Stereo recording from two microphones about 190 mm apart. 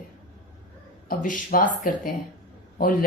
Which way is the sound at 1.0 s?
45° left (ahead or behind).